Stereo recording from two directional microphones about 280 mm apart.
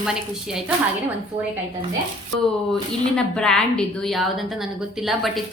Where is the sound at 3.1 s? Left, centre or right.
Centre.